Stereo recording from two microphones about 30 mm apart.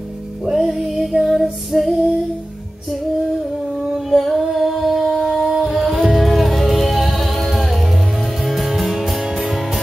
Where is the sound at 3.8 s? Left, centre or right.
Centre.